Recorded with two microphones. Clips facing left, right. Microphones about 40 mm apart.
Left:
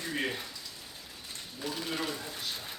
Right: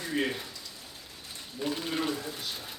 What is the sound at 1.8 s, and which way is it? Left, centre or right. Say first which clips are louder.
Speech: right 4 dB; centre.